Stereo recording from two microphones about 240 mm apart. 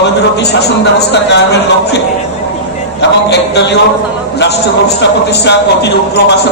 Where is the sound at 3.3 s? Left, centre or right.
Left.